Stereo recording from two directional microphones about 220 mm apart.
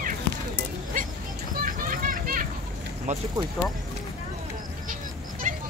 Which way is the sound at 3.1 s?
35° right (ahead or behind).